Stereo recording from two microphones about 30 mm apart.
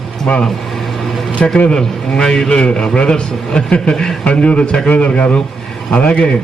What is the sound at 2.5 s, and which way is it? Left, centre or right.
Speech, left.